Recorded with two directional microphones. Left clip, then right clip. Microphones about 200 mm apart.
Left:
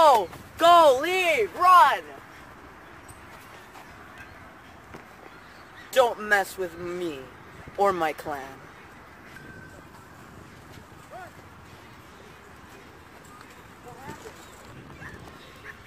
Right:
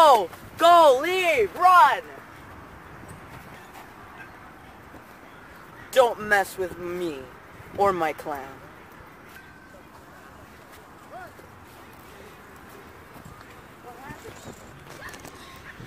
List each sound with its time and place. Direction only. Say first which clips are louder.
0.0 s a sound: right 2 dB; 25° right (ahead or behind)
0.6 s speech: right 1 dB; centre (ahead or behind)
1.3 s speech: even; 25° left (ahead or behind)
1.8 s speech: right 1 dB; 45° left (ahead or behind)
5.9 s speech: right 2 dB; 5° right (ahead or behind)